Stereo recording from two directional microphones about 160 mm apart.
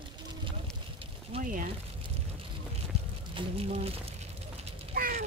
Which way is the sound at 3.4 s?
35° right (ahead or behind).